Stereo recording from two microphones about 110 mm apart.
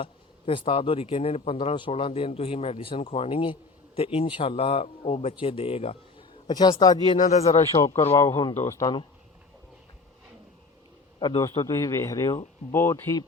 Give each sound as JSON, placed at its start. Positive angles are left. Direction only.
{"t": 0.0, "sound": "speech", "side_deg": 55}
{"t": 6.5, "sound": "speech", "side_deg": 40}
{"t": 7.3, "sound": "speech", "side_deg": 90}
{"t": 7.8, "sound": "speech", "side_deg": 35}
{"t": 11.2, "sound": "a man's voice", "side_deg": 40}
{"t": 11.6, "sound": "speech", "side_deg": 30}